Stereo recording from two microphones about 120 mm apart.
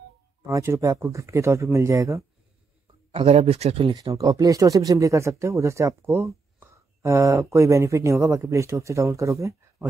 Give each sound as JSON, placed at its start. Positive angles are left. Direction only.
{"t": 0.5, "sound": "speech", "side_deg": -25}
{"t": 3.1, "sound": "speech", "side_deg": -55}
{"t": 3.9, "sound": "speech", "side_deg": -30}